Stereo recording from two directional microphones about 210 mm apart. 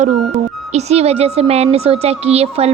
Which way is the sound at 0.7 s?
30° right (ahead or behind).